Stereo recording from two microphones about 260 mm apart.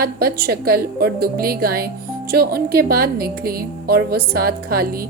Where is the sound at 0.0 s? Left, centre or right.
Right.